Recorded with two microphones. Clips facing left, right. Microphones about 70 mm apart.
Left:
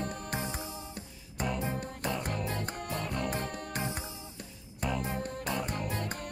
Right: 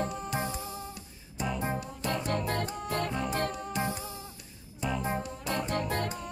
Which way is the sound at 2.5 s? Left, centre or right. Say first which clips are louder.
Right 4 dB; right.